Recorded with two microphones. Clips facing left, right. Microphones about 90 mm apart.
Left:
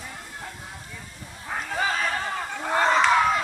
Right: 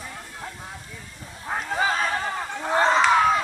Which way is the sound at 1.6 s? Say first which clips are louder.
Right 2 dB; 20° right (ahead or behind).